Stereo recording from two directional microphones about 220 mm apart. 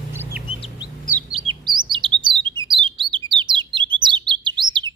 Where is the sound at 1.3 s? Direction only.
25° right (ahead or behind).